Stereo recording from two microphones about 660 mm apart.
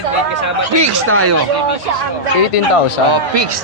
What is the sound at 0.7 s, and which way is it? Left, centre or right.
Speech, right.